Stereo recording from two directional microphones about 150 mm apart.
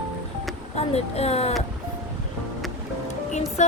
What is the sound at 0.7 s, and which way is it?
Speech, 45° left (ahead or behind).